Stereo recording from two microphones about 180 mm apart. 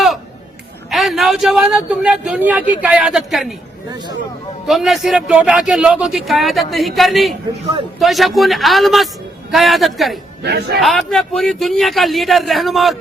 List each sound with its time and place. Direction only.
0.9 s a man's voice: centre (ahead or behind)
4.6 s a man's voice: centre (ahead or behind)
10.4 s a man's voice: 65° right (ahead or behind)
10.8 s a man's voice: centre (ahead or behind)